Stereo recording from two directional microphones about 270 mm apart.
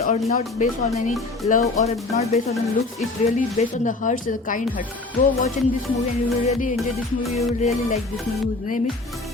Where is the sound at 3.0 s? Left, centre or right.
Left.